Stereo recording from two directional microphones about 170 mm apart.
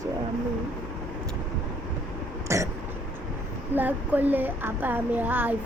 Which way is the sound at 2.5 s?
15° right (ahead or behind).